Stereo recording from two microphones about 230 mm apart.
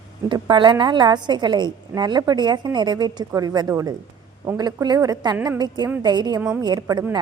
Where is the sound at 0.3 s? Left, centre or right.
Centre.